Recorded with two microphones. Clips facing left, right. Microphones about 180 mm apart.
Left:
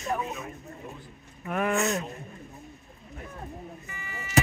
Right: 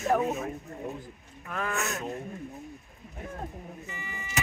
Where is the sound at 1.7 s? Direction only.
Centre (ahead or behind).